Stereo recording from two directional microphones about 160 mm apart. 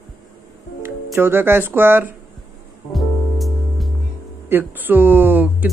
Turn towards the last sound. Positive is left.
turn(degrees=-10)  # may be behind; listen again after turning